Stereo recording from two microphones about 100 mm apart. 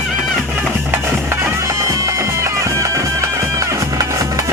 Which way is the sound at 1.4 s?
30° right (ahead or behind).